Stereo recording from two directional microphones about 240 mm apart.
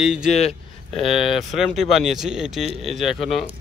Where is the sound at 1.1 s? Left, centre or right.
Centre.